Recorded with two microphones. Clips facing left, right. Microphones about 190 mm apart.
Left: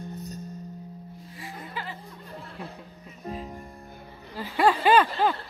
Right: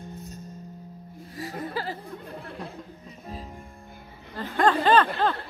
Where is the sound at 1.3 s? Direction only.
40° right (ahead or behind).